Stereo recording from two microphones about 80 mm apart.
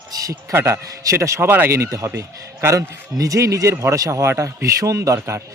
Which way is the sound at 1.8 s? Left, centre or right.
Right.